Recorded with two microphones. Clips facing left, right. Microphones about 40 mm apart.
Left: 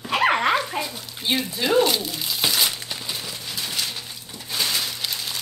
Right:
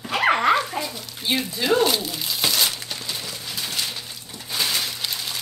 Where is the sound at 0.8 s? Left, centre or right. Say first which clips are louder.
Even; centre.